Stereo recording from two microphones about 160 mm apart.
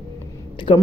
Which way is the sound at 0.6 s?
30° left (ahead or behind).